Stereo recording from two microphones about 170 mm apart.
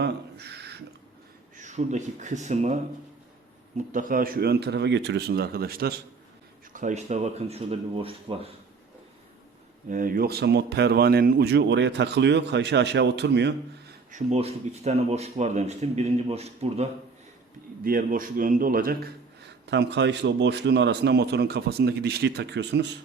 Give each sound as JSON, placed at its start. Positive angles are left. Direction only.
{"t": 0.0, "sound": "a sound", "side_deg": -75}
{"t": 1.5, "sound": "speech", "side_deg": -45}
{"t": 3.8, "sound": "speech", "side_deg": -50}
{"t": 6.7, "sound": "speech", "side_deg": -45}
{"t": 9.9, "sound": "speech", "side_deg": -55}
{"t": 14.1, "sound": "speech", "side_deg": -45}
{"t": 17.8, "sound": "a man's voice", "side_deg": -55}
{"t": 19.6, "sound": "a man's voice", "side_deg": -90}